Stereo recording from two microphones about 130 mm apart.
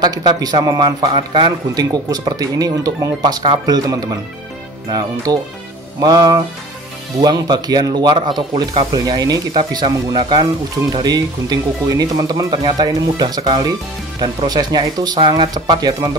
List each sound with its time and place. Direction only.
0.0 s speech: 30° right (ahead or behind)